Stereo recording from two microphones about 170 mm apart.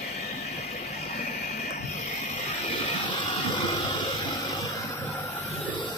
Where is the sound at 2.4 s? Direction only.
35° left (ahead or behind).